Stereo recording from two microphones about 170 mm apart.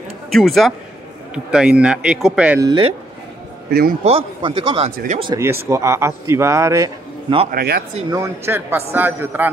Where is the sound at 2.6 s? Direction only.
25° right (ahead or behind).